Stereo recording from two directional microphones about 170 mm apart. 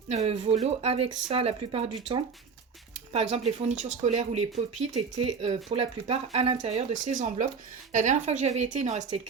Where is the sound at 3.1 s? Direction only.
40° right (ahead or behind).